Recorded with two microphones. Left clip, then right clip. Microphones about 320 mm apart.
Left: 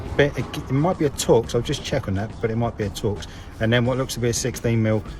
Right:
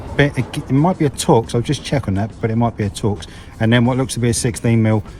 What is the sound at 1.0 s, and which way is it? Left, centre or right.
Speech, centre.